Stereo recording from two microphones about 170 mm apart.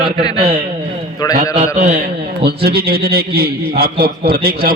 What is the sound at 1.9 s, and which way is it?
A man's voice, 70° right (ahead or behind).